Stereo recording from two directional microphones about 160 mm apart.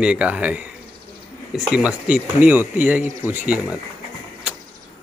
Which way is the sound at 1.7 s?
5° right (ahead or behind).